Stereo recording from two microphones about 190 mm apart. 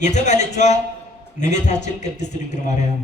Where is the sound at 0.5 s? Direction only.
35° left (ahead or behind).